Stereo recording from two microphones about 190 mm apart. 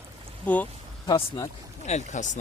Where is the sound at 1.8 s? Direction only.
40° left (ahead or behind).